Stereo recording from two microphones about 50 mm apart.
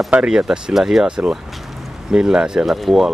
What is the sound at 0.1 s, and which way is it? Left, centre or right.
Speech, centre.